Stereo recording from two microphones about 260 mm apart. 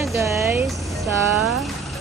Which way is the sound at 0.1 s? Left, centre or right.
Centre.